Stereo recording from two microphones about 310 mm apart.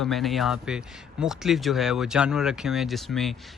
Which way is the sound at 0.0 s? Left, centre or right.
Centre.